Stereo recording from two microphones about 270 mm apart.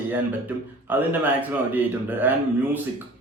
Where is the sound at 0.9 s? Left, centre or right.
Centre.